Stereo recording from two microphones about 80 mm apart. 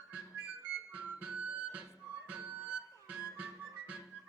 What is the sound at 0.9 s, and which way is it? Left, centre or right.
Music, centre.